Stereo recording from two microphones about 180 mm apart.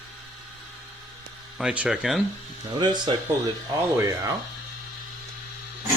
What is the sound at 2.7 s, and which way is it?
Speech, 25° right (ahead or behind).